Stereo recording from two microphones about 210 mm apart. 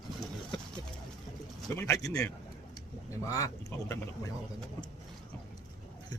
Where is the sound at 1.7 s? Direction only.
10° left (ahead or behind).